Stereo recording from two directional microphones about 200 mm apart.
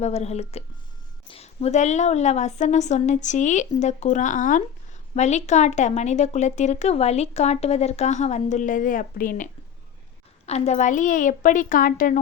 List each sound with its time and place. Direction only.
0.0 s speech: 30° left (ahead or behind)